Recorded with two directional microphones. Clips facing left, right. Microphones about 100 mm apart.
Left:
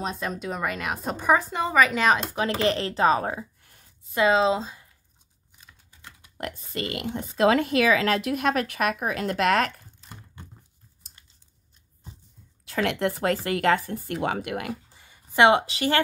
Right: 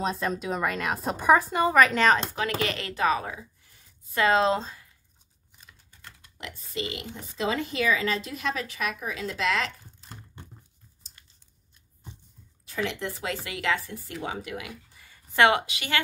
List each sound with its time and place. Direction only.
0.0 s a woman's voice: centre (ahead or behind)
2.3 s speech: 30° left (ahead or behind)
3.3 s a sound: 55° left (ahead or behind)
4.3 s a woman's voice: centre (ahead or behind)
5.6 s computer keyboard: 10° left (ahead or behind)
6.3 s speech: 50° left (ahead or behind)
12.6 s speech: 65° left (ahead or behind)
14.7 s a sound: 30° left (ahead or behind)
15.6 s speech: 35° left (ahead or behind)